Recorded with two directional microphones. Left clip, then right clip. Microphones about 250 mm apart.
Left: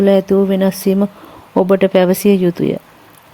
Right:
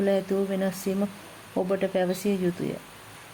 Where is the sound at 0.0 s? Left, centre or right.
Left.